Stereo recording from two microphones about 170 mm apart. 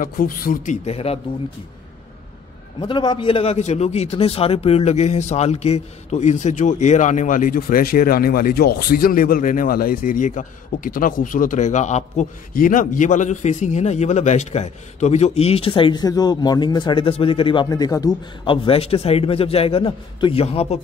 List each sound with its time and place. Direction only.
0.0 s speech: 55° left (ahead or behind)
0.8 s a man's voice: 35° left (ahead or behind)
2.8 s a man's voice: 25° left (ahead or behind); by 12.3 s 40° left (ahead or behind)
12.5 s a man's voice: 55° left (ahead or behind); by 20.8 s 40° left (ahead or behind)